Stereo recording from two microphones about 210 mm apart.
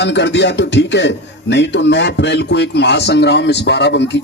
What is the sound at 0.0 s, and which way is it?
A man's voice, 55° left (ahead or behind).